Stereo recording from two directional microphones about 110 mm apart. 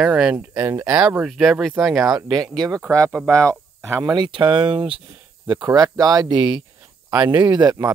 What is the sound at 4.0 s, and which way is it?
Speech, 40° right (ahead or behind).